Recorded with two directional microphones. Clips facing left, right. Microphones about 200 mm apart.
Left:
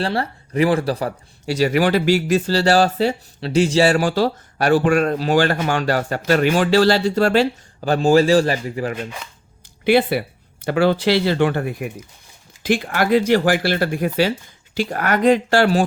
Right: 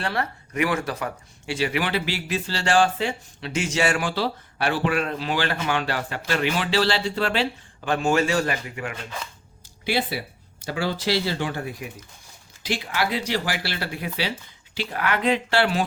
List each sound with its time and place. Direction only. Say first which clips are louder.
0.0 s speech: left 5 dB; 30° left (ahead or behind)
9.8 s speech: left 10 dB; 60° left (ahead or behind)